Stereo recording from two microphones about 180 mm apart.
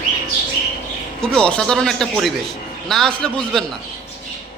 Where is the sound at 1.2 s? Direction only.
5° left (ahead or behind).